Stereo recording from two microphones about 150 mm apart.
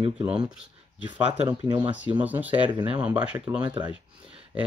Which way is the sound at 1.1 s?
10° right (ahead or behind).